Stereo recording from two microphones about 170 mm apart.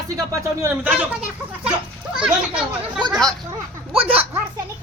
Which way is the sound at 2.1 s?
5° right (ahead or behind).